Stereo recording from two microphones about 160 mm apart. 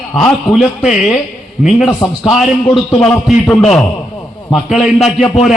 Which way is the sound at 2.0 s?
20° left (ahead or behind).